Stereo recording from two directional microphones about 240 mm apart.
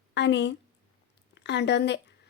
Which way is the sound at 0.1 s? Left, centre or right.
Left.